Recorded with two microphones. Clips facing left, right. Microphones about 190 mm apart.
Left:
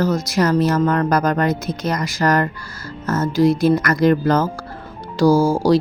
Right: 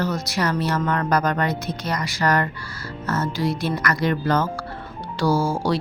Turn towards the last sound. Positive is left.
turn(degrees=40)  # may be behind; listen again after turning